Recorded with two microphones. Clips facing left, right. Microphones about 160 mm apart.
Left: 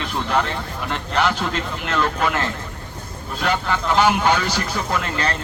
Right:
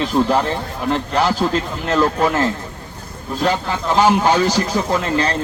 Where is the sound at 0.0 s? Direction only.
35° right (ahead or behind).